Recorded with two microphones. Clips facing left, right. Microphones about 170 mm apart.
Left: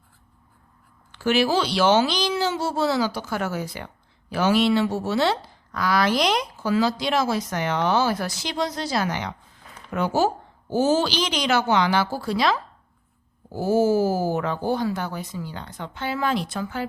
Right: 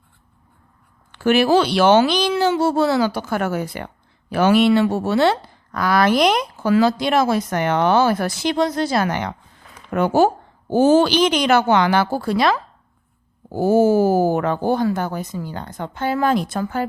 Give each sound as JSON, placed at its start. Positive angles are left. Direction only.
{"t": 1.1, "sound": "speech", "side_deg": -55}